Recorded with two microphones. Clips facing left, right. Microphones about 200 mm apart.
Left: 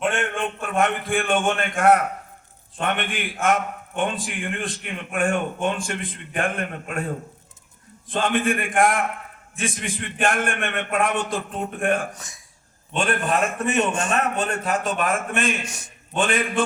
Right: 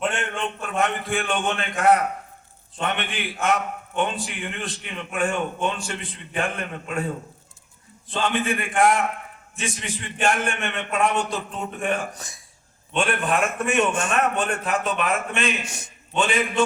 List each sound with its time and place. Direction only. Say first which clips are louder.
0.1 s a man's voice: left 3 dB; 50° left (ahead or behind)
8.1 s a man's voice: left 2 dB; 50° left (ahead or behind)
12.1 s speech: right 2 dB; 35° right (ahead or behind)
12.9 s a man's voice: even; 40° left (ahead or behind)